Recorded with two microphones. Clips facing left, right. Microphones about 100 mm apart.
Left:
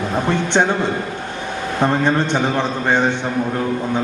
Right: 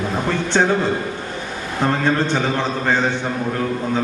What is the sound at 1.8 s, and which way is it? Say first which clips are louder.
A man's voice: left 1 dB; 20° left (ahead or behind).